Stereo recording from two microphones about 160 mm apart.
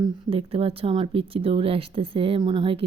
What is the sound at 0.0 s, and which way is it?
Speech, 35° right (ahead or behind).